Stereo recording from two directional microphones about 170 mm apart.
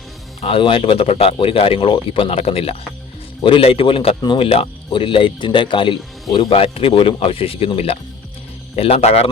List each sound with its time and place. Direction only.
0.4 s speech: 30° left (ahead or behind)